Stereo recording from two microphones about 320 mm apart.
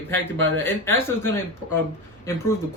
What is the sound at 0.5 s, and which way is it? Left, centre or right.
Speech, centre.